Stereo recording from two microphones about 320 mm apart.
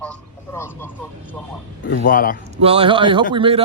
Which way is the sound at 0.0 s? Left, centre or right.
Centre.